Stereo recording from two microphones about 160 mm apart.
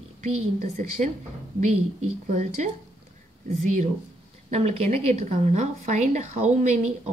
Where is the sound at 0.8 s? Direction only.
50° right (ahead or behind).